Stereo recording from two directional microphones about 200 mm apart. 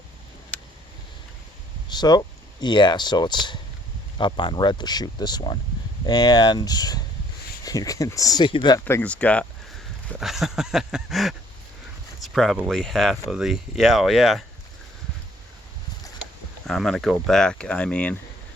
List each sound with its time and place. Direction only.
1.9 s speech: 20° left (ahead or behind)
8.8 s speech: 10° left (ahead or behind)
16.6 s speech: centre (ahead or behind)